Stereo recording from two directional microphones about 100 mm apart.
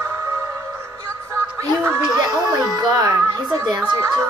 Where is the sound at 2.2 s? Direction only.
40° right (ahead or behind).